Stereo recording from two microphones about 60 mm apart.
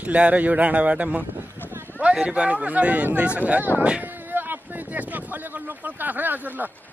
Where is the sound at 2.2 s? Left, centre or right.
Centre.